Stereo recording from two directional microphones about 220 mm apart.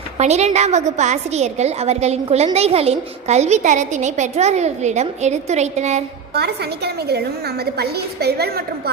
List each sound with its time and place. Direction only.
0.2 s a woman's voice: 30° right (ahead or behind)
6.3 s a woman's voice: 45° right (ahead or behind)